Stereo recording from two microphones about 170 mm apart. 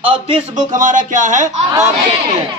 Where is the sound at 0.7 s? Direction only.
50° right (ahead or behind).